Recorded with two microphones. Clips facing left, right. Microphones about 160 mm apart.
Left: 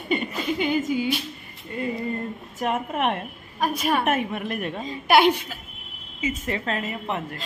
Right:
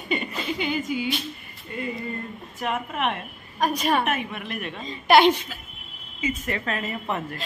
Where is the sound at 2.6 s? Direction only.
40° left (ahead or behind).